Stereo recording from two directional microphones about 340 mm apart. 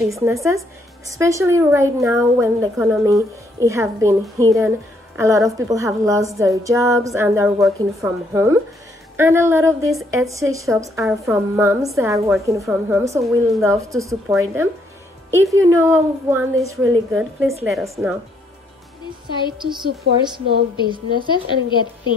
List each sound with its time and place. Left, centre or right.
0.1 s a woman's voice: centre
16.7 s a woman's voice: right
17.1 s a woman's voice: centre
19.6 s a woman's voice: centre
21.3 s a woman's voice: centre